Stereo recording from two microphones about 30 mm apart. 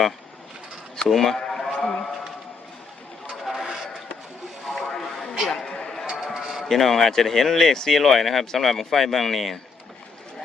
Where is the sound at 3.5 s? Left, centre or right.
Centre.